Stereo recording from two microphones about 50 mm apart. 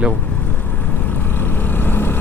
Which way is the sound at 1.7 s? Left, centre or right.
Left.